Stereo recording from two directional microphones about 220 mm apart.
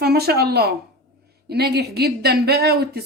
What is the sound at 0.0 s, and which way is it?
Speech, 45° right (ahead or behind).